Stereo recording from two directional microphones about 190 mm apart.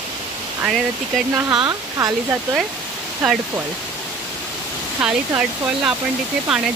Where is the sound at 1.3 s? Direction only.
20° right (ahead or behind).